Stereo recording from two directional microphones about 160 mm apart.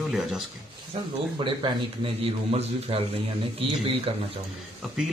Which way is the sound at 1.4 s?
30° right (ahead or behind).